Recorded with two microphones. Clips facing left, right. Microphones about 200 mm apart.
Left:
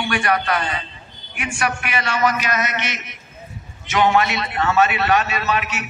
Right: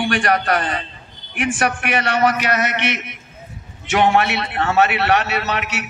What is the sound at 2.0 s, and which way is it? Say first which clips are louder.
A man's voice: right 2 dB; 60° right (ahead or behind).